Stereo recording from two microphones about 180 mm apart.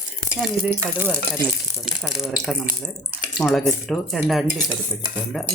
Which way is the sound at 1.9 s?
Centre (ahead or behind).